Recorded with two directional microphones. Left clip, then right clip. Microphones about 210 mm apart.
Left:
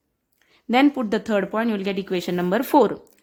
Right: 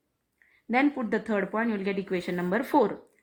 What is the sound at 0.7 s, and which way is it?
A woman's voice, 35° left (ahead or behind).